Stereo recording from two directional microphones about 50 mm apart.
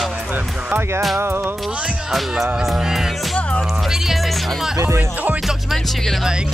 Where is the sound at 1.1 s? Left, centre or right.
Right.